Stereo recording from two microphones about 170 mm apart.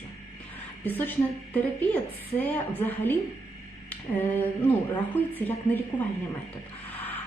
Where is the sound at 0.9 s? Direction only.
10° left (ahead or behind).